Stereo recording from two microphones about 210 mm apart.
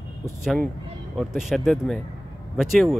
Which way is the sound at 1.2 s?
Centre (ahead or behind).